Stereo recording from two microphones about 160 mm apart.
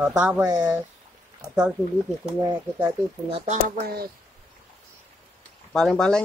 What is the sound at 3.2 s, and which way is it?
Speech, 35° right (ahead or behind).